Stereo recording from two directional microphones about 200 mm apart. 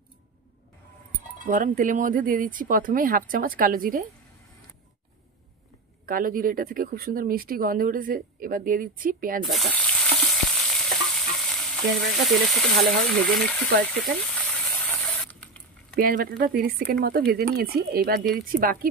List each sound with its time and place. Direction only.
1.4 s speech: 40° right (ahead or behind)
6.0 s speech: 45° right (ahead or behind)
9.4 s frying: centre (ahead or behind)
11.1 s stir: centre (ahead or behind)
14.4 s spray: 10° left (ahead or behind)
15.9 s speech: 45° right (ahead or behind)